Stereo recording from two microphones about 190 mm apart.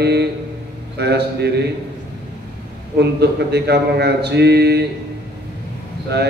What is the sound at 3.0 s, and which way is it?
A man's voice, 60° right (ahead or behind).